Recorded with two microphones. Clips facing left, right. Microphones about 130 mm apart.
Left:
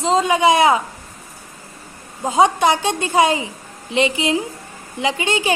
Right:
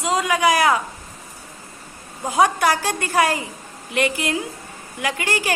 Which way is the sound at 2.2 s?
20° left (ahead or behind).